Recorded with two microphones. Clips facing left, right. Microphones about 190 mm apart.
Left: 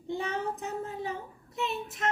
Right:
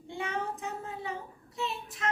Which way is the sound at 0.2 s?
35° left (ahead or behind).